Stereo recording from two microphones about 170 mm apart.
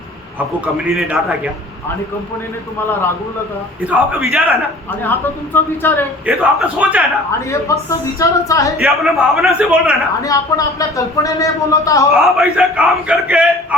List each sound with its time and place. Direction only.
0.6 s a man's voice: 5° right (ahead or behind)
3.8 s a man's voice: 5° right (ahead or behind)
5.8 s a man's voice: 10° left (ahead or behind)
6.2 s a man's voice: 10° right (ahead or behind)
7.9 s speech: 20° left (ahead or behind)
8.8 s a man's voice: centre (ahead or behind)
10.2 s speech: 20° left (ahead or behind)
12.1 s a man's voice: centre (ahead or behind)